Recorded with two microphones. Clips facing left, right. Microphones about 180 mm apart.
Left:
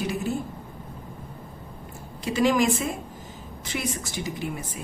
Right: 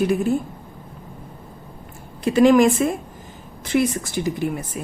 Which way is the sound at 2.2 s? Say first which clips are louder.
Right 8 dB; 55° right (ahead or behind).